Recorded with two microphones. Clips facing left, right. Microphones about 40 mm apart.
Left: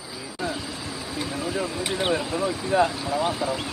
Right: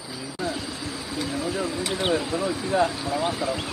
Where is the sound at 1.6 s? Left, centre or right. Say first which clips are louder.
Even; left.